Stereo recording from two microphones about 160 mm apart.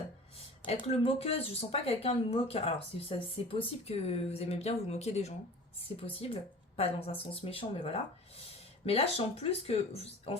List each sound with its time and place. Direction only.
0.3 s speech: 35° left (ahead or behind)